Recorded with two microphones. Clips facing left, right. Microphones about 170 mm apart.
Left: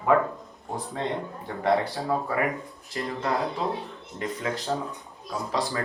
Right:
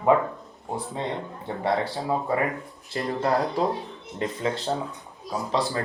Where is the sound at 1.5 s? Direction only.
20° right (ahead or behind).